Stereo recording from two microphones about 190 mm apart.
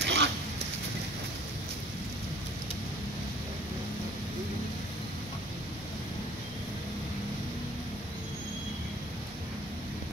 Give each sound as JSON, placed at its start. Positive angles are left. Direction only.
{"t": 0.0, "sound": "dog", "side_deg": -65}